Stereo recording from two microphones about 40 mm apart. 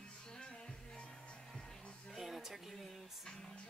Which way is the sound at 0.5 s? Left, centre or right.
Left.